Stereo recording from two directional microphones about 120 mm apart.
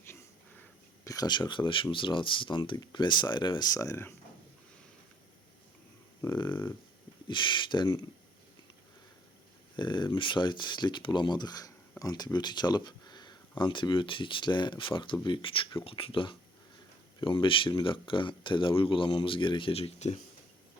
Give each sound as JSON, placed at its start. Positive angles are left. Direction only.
{"t": 0.1, "sound": "a sound", "side_deg": 15}
{"t": 1.0, "sound": "speech", "side_deg": 30}
{"t": 6.3, "sound": "speech", "side_deg": 40}
{"t": 9.7, "sound": "speech", "side_deg": 40}